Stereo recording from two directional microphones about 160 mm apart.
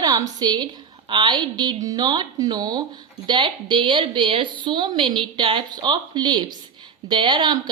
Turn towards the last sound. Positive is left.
turn(degrees=-30)  # may be behind; listen again after turning